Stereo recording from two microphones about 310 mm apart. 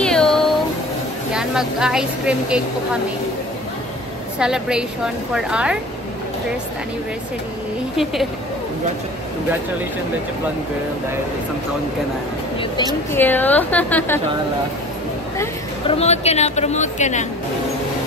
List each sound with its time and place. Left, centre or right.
0.0 s a sound: centre
1.3 s a woman's voice: centre
4.4 s a woman's voice: centre
8.0 s a woman's voice: centre
13.1 s a woman's voice: centre
15.9 s speech: centre